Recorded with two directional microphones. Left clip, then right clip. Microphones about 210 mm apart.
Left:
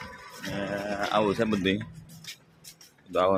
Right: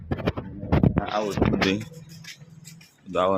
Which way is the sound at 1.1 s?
35° left (ahead or behind).